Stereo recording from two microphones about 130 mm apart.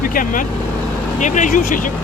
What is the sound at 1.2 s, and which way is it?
Speech, 70° left (ahead or behind).